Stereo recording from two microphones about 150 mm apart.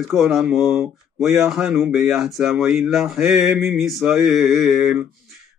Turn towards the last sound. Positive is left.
turn(degrees=0)  # may be behind; listen again after turning